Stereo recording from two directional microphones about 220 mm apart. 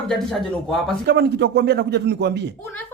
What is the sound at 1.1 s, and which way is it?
A man's voice, 50° right (ahead or behind).